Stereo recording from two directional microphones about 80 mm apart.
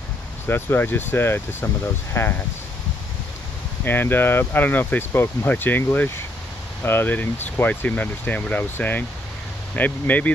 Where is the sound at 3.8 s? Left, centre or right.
Left.